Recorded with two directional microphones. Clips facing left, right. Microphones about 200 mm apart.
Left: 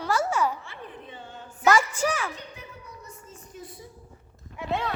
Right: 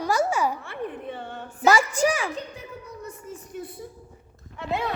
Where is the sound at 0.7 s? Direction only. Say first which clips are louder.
Right 9 dB; 60° right (ahead or behind).